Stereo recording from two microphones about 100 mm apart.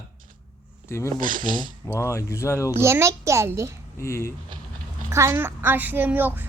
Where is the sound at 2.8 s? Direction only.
30° right (ahead or behind).